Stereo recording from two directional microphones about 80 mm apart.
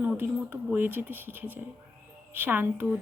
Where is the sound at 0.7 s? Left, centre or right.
Right.